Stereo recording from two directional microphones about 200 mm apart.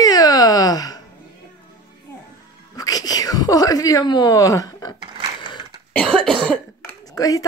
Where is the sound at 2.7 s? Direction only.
20° left (ahead or behind).